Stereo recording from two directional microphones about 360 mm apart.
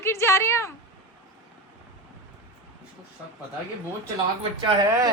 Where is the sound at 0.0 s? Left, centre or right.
Centre.